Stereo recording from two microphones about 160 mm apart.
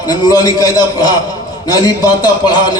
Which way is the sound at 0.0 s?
25° left (ahead or behind).